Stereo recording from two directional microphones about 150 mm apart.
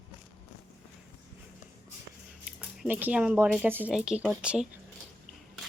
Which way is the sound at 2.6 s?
10° right (ahead or behind).